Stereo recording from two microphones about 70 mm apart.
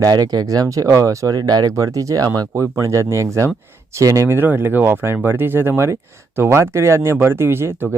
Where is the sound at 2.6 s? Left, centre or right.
Right.